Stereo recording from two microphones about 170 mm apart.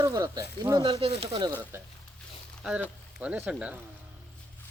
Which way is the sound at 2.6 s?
5° right (ahead or behind).